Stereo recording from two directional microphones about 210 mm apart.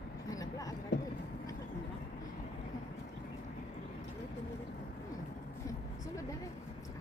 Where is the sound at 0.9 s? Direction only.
55° left (ahead or behind).